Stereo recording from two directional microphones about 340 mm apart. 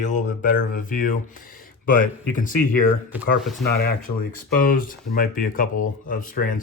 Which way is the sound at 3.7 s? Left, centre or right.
Left.